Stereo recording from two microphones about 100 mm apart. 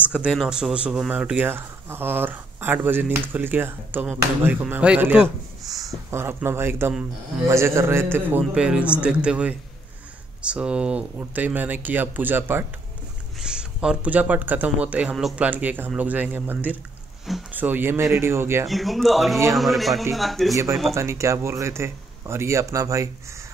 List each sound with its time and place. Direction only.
0.0 s speech: 10° right (ahead or behind)
6.0 s speech: 25° right (ahead or behind)
8.5 s speech: 10° right (ahead or behind)
13.4 s speech: 10° right (ahead or behind); by 18.7 s 25° right (ahead or behind)
18.7 s a man's voice: centre (ahead or behind)
20.9 s speech: 30° right (ahead or behind)